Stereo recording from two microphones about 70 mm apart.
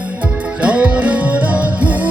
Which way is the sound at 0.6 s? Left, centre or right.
Centre.